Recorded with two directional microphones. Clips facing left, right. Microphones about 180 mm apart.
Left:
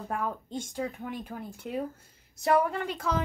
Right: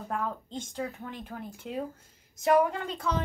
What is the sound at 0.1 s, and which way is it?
Speech, 10° left (ahead or behind).